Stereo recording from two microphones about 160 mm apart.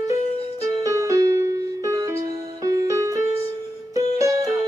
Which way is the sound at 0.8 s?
20° right (ahead or behind).